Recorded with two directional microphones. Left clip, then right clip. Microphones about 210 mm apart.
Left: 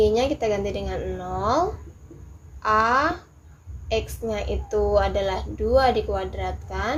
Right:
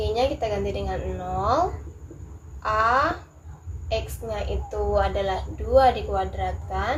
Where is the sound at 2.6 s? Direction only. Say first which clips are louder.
Left 1 dB; 40° left (ahead or behind).